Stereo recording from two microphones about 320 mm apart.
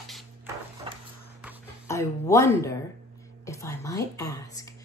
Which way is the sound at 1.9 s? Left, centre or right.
Centre.